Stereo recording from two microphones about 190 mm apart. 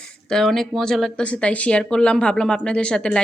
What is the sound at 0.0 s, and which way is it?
Speech, 5° left (ahead or behind).